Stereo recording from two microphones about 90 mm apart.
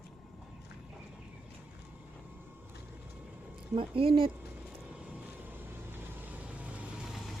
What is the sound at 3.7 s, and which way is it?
Speech, 85° right.